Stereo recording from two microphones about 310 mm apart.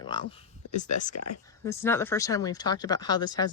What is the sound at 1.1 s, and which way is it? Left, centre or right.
Speech, left.